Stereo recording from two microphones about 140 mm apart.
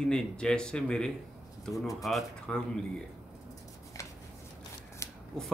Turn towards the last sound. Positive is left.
turn(degrees=20)  # may be behind; listen again after turning